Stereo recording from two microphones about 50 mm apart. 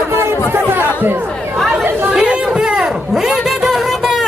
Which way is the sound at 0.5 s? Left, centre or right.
Right.